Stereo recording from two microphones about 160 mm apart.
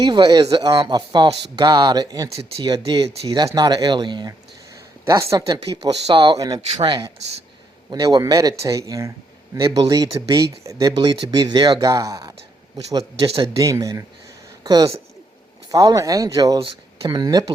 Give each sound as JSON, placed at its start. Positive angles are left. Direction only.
{"t": 0.0, "sound": "speech", "side_deg": -25}